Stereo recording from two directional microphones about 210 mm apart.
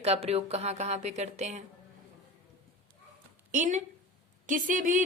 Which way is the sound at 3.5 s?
35° right (ahead or behind).